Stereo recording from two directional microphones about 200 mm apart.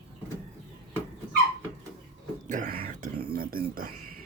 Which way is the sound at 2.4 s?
40° right (ahead or behind).